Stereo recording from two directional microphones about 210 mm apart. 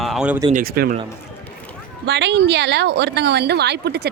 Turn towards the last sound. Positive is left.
turn(degrees=-50)  # may be behind; listen again after turning